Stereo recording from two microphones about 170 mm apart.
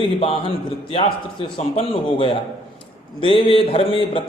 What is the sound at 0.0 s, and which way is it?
A man's voice, 35° left (ahead or behind).